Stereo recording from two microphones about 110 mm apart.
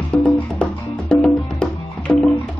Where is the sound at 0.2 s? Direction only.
10° left (ahead or behind).